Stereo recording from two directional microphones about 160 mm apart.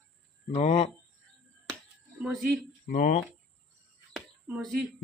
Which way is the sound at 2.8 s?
60° left (ahead or behind).